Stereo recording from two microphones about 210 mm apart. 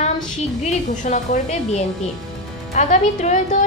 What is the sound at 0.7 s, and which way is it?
A woman's voice, 35° left (ahead or behind).